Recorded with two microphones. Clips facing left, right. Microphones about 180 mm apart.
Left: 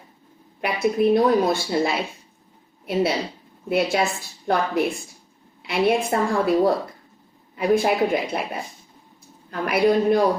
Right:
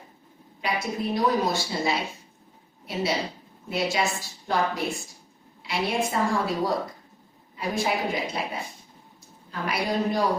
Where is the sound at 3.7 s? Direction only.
55° left (ahead or behind).